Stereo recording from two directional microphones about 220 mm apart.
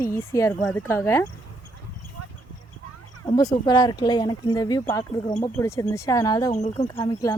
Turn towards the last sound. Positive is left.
turn(degrees=15)  # may be behind; listen again after turning